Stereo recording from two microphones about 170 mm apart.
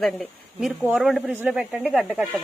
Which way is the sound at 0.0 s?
Centre (ahead or behind).